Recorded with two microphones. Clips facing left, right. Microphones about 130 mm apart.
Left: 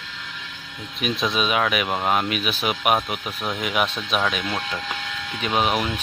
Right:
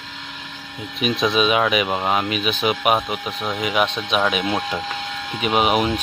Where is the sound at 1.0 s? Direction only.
Centre (ahead or behind).